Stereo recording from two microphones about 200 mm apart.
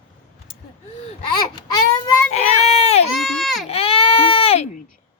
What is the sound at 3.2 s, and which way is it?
Baby cry, centre (ahead or behind).